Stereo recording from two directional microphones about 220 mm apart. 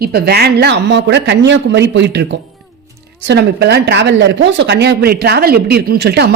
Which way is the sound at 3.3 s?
50° right (ahead or behind).